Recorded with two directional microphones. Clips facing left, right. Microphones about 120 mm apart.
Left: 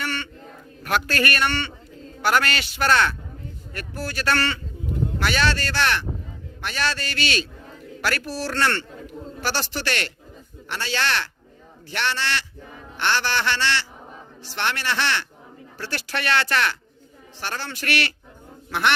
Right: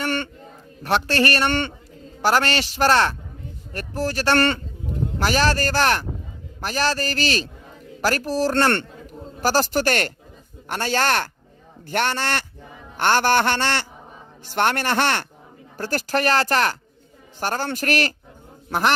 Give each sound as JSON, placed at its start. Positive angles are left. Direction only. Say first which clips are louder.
{"t": 0.0, "sound": "a sound", "louder": "right 5 dB", "side_deg": -50}
{"t": 0.8, "sound": "a man's voice", "louder": "right 3 dB", "side_deg": -30}
{"t": 1.5, "sound": "a man's voice", "louder": "right 4 dB", "side_deg": -50}
{"t": 2.2, "sound": "a man's voice", "louder": "right 2 dB", "side_deg": -35}
{"t": 4.4, "sound": "a man's voice", "louder": "right 6 dB", "side_deg": -50}
{"t": 5.2, "sound": "a man's voice", "louder": "right 4 dB", "side_deg": -35}